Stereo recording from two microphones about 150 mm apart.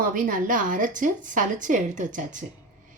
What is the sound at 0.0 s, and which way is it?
A woman's voice, 65° right (ahead or behind).